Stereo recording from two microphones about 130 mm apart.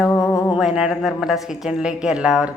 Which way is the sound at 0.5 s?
5° right (ahead or behind).